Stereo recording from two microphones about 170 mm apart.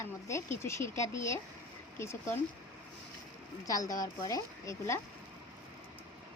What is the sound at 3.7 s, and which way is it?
Speech, 20° left (ahead or behind).